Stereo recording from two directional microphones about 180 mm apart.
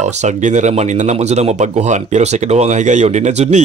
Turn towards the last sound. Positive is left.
turn(degrees=-40)  # may be behind; listen again after turning